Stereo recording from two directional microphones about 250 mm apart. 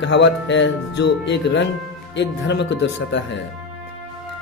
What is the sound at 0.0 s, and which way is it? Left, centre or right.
Speech, left.